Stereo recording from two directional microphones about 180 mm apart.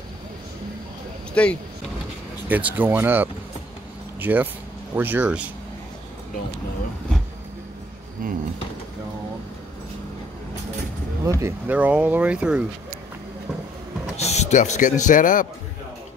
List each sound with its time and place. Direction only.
1.3 s speech: 5° left (ahead or behind)
2.4 s speech: 10° right (ahead or behind)
8.2 s a sound: 50° right (ahead or behind)
11.2 s speech: 15° right (ahead or behind)
14.1 s speech: 35° left (ahead or behind)